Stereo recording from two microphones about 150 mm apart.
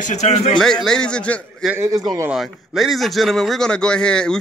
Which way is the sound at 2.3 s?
Centre (ahead or behind).